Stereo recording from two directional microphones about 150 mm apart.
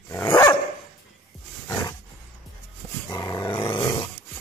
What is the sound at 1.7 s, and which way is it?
Roaring cats, 20° left (ahead or behind).